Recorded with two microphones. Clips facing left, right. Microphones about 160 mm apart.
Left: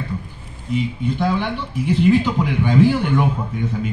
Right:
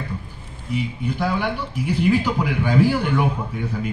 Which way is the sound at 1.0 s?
10° right (ahead or behind).